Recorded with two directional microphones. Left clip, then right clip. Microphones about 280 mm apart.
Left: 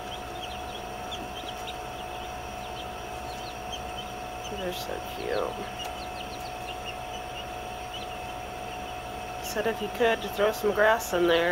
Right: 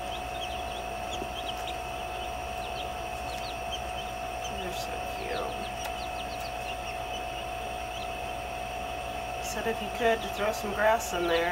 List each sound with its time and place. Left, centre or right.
10.0 s speech: left